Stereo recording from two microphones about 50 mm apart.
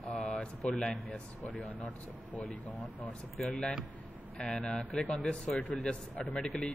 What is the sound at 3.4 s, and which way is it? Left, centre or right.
Speech, centre.